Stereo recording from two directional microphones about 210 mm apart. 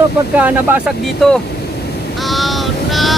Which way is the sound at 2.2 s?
Centre (ahead or behind).